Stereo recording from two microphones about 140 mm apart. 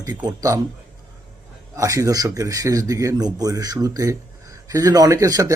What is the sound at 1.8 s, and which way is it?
Speech, 25° right (ahead or behind).